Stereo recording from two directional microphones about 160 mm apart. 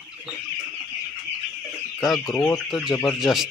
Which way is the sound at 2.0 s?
Centre (ahead or behind).